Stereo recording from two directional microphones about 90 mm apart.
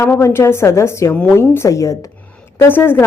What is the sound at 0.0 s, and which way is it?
A woman's voice, 30° left (ahead or behind).